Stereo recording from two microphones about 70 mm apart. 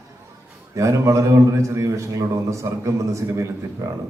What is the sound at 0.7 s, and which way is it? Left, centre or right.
A man's voice, right.